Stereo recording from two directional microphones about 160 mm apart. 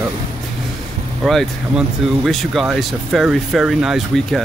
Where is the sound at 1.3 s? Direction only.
Centre (ahead or behind).